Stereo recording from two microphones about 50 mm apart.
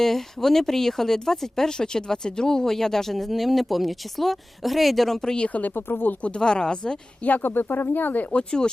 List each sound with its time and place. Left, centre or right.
0.0 s speech: centre
5.5 s speech: left
6.2 s speech: centre
7.3 s speech: left
8.4 s speech: centre